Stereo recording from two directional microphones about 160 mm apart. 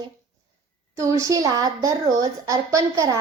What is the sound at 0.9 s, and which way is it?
A woman's voice, 20° right (ahead or behind).